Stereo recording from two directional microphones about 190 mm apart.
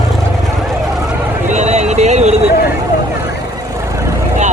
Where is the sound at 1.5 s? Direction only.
35° right (ahead or behind).